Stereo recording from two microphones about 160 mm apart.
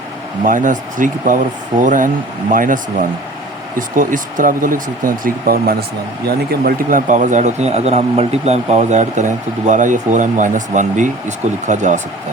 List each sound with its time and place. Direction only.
0.4 s speech: 55° right (ahead or behind)
6.2 s speech: 80° right
7.1 s speech: 50° right (ahead or behind)